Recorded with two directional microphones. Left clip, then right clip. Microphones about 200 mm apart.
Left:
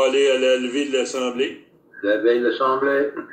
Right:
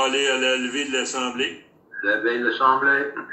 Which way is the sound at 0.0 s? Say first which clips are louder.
Left 4 dB; 10° right (ahead or behind).